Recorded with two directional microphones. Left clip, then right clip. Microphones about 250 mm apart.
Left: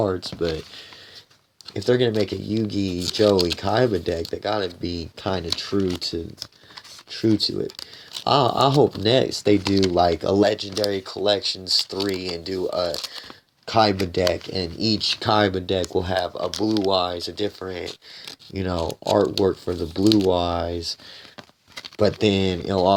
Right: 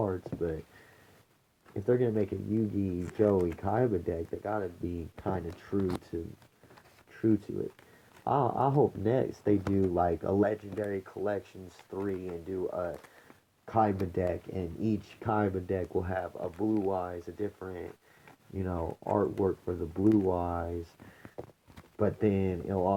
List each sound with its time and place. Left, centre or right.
0.0 s speech: left
1.7 s speech: left
21.9 s speech: left